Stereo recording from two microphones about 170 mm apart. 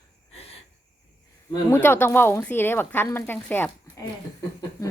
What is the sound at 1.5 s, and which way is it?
Speech, 15° left (ahead or behind).